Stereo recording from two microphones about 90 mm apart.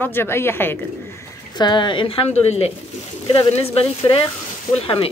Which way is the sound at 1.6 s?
55° left (ahead or behind).